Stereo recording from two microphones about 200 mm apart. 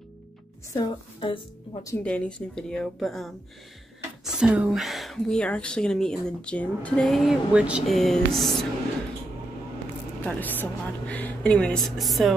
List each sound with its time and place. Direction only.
0.7 s speech: 25° left (ahead or behind)
2.0 s speech: 5° left (ahead or behind)
10.2 s speech: 10° left (ahead or behind)